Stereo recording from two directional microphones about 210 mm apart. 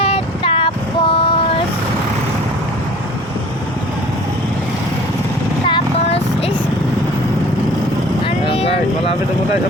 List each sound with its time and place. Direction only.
0.0 s vehicle: 25° left (ahead or behind)
5.6 s vehicle: 25° left (ahead or behind)
8.4 s vehicle: 25° left (ahead or behind)